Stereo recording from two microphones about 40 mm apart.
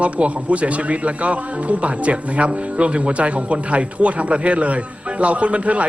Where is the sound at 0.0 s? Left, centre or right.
Right.